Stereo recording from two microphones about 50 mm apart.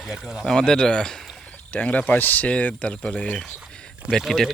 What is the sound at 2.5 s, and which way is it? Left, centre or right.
Speech, left.